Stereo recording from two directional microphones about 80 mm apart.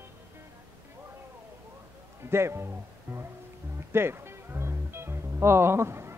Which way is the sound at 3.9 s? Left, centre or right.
Right.